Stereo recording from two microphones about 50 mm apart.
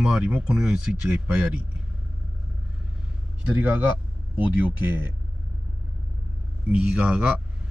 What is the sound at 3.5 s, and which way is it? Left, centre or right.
Speech, right.